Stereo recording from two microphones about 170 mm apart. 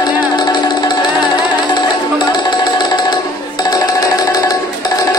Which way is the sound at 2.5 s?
25° left (ahead or behind).